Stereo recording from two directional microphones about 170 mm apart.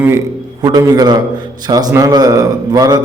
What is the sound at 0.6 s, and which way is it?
A man's voice, 20° right (ahead or behind).